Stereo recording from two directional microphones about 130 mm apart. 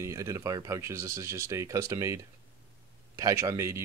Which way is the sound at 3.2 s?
25° right (ahead or behind).